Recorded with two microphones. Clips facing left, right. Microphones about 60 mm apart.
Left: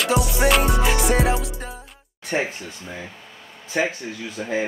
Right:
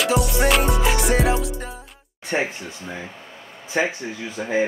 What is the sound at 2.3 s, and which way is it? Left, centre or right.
Speech, centre.